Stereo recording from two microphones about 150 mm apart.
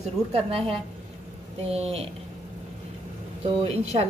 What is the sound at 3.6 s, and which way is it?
Speech, 45° right (ahead or behind).